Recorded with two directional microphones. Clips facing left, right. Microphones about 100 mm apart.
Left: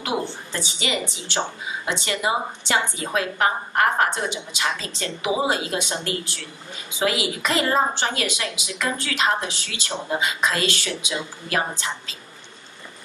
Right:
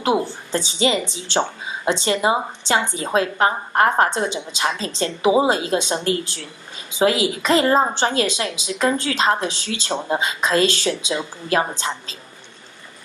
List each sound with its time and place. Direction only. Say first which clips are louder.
0.0 s a woman's voice: right 6 dB; 30° right (ahead or behind)